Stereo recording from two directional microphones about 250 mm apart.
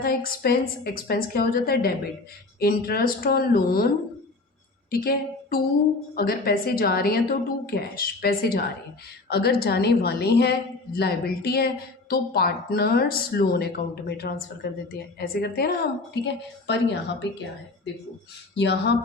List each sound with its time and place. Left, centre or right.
0.0 s a woman's voice: left
4.9 s a woman's voice: left
18.5 s a woman's voice: left